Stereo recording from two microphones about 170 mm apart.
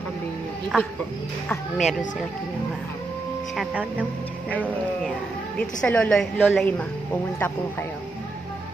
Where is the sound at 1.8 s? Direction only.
50° left (ahead or behind).